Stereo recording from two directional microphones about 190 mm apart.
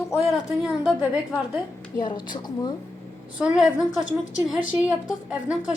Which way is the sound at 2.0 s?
25° left (ahead or behind).